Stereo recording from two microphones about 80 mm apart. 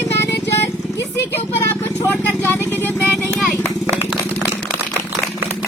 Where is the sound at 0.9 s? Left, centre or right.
Left.